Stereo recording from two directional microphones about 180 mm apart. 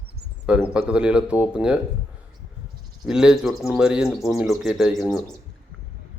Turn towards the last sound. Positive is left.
turn(degrees=0)  # may be behind; listen again after turning